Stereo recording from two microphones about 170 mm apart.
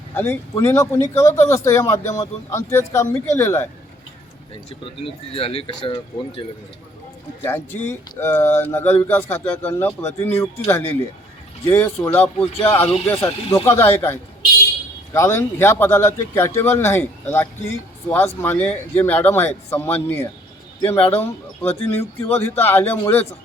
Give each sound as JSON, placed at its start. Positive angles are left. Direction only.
{"t": 0.1, "sound": "speech", "side_deg": 15}
{"t": 5.0, "sound": "speech", "side_deg": 35}
{"t": 7.4, "sound": "speech", "side_deg": 15}